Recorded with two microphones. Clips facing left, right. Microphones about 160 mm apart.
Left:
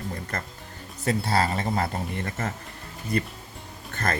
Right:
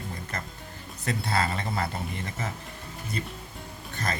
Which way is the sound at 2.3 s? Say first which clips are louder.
Left 4 dB; 55° left (ahead or behind).